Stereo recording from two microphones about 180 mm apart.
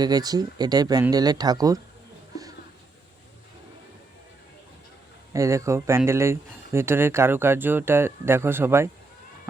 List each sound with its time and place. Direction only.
0.0 s speech: 20° right (ahead or behind)
5.3 s speech: 15° right (ahead or behind)